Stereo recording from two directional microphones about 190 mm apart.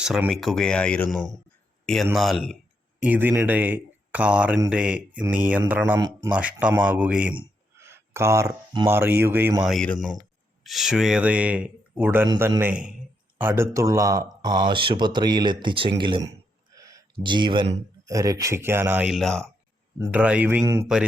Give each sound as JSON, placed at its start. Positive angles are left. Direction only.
{"t": 0.0, "sound": "speech", "side_deg": -5}
{"t": 6.3, "sound": "speech", "side_deg": -5}
{"t": 9.6, "sound": "speech", "side_deg": 5}
{"t": 20.0, "sound": "speech", "side_deg": -10}